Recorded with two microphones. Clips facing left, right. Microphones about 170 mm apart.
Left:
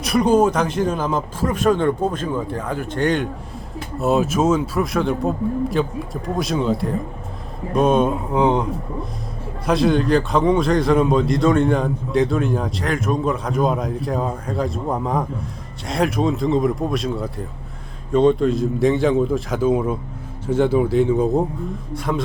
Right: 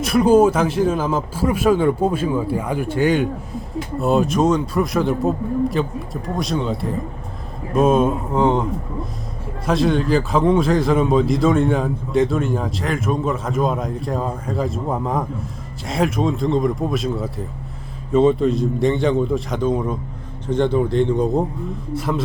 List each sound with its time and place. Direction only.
0.0 s a man's voice: 5° right (ahead or behind)
9.6 s a man's voice: centre (ahead or behind)